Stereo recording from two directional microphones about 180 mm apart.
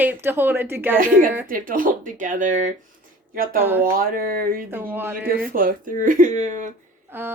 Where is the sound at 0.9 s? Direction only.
50° right (ahead or behind).